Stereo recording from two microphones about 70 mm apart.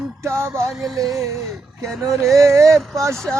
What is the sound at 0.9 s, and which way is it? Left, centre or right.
Speech, right.